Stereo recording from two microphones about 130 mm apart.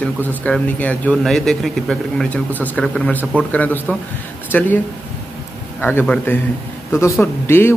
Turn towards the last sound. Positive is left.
turn(degrees=20)  # may be behind; listen again after turning